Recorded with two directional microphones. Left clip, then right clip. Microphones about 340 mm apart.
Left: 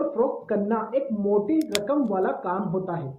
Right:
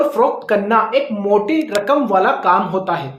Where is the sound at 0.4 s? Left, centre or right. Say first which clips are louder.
Right 12 dB; centre.